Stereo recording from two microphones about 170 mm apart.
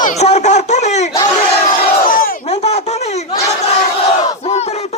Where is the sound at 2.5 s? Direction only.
35° left (ahead or behind).